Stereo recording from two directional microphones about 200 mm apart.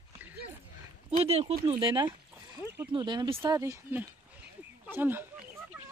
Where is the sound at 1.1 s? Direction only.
30° right (ahead or behind).